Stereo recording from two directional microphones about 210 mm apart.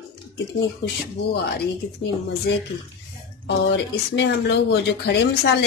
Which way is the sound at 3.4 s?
55° left (ahead or behind).